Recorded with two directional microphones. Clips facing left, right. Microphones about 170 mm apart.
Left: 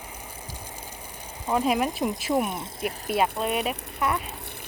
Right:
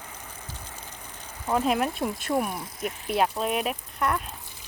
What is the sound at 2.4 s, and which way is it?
Speech, 25° left (ahead or behind).